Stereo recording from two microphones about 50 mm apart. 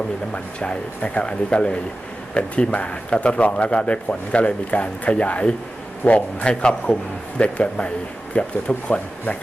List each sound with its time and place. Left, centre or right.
0.3 s a man's voice: left